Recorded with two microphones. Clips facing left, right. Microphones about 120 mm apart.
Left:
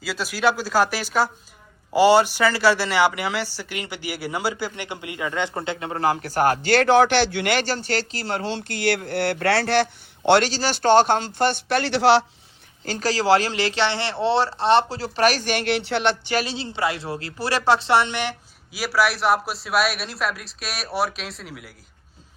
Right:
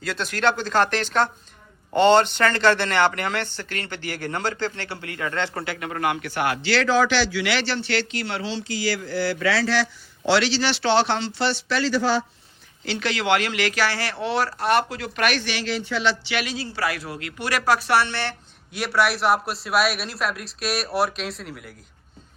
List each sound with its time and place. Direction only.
0.0 s speech: 5° left (ahead or behind); by 12.2 s 75° left (ahead or behind)
12.8 s speech: 40° left (ahead or behind)
15.6 s speech: 65° left (ahead or behind)
16.3 s speech: 30° left (ahead or behind); by 18.3 s 15° left (ahead or behind)
18.7 s a man's voice: centre (ahead or behind)